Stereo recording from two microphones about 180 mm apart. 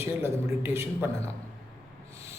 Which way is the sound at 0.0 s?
15° right (ahead or behind).